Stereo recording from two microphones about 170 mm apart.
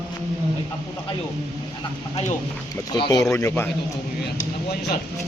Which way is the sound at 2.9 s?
25° left (ahead or behind).